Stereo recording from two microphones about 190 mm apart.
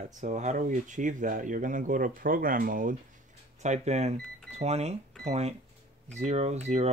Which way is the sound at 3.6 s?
35° right (ahead or behind).